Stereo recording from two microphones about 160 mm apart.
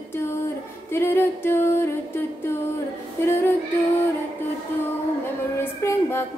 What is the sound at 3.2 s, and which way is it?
Music, 15° left (ahead or behind).